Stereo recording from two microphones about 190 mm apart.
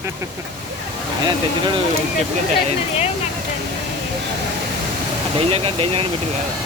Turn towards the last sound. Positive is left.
turn(degrees=-30)  # may be behind; listen again after turning